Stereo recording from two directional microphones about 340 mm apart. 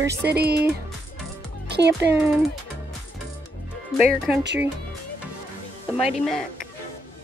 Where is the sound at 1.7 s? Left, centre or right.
Right.